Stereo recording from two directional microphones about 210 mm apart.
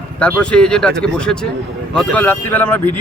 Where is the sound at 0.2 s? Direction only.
5° left (ahead or behind).